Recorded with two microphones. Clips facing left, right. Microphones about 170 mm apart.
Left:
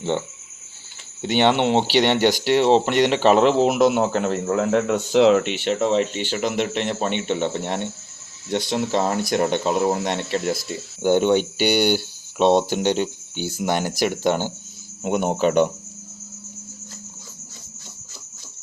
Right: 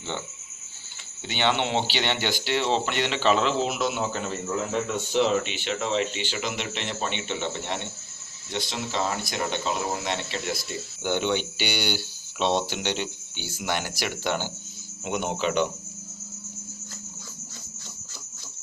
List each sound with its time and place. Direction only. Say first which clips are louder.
1.2 s speech: left 8 dB; 65° left (ahead or behind)
2.1 s speech: left 10 dB; 40° left (ahead or behind)
2.6 s a man's voice: left 9 dB; 60° left (ahead or behind)
5.7 s speech: left 6 dB; 45° left (ahead or behind)